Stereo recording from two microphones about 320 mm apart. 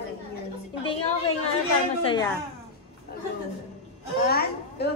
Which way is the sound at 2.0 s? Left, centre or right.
Centre.